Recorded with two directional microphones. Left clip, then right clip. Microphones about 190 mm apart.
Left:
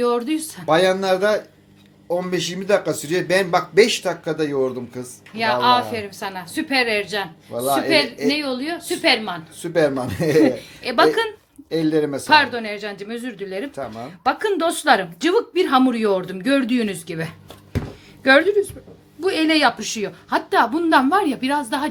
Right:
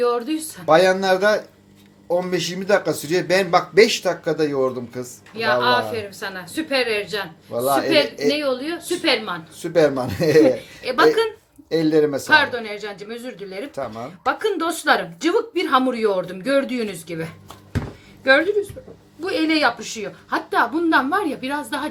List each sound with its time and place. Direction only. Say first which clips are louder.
0.0 s a woman's voice: even; 45° left (ahead or behind)
0.6 s speech: right 2 dB; centre (ahead or behind)
5.4 s a woman's voice: left 1 dB; 45° left (ahead or behind)
7.5 s speech: right 1 dB; centre (ahead or behind)
8.4 s a woman's voice: right 2 dB; 45° left (ahead or behind)
9.6 s speech: right 2 dB; centre (ahead or behind)
10.6 s a woman's voice: even; 45° left (ahead or behind)
11.7 s speech: right 2 dB; centre (ahead or behind)
12.3 s a woman's voice: left 4 dB; 40° left (ahead or behind)
13.7 s speech: right 1 dB; centre (ahead or behind)
14.3 s a woman's voice: left 2 dB; 45° left (ahead or behind)